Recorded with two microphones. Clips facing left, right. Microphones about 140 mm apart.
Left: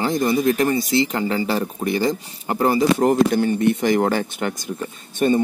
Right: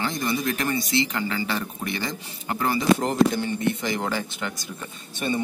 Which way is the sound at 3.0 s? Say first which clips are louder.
Left 5 dB; 55° left (ahead or behind).